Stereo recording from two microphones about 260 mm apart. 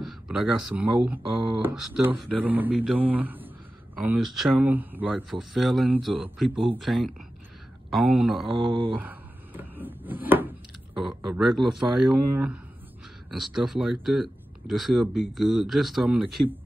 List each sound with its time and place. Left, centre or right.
0.0 s a man's voice: centre
8.6 s speech: right
8.9 s wood: centre
11.0 s speech: centre
13.3 s speech: centre